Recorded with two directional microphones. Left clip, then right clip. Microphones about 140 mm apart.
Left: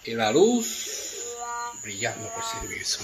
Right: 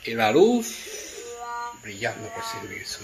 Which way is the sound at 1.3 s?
Centre (ahead or behind).